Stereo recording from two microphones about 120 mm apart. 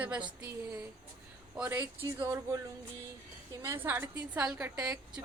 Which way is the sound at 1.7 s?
25° right (ahead or behind).